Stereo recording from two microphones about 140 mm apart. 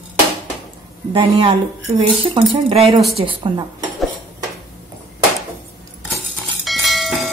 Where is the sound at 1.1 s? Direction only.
40° right (ahead or behind).